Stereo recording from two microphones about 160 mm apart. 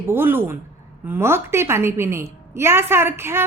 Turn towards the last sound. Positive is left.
turn(degrees=-15)  # may be behind; listen again after turning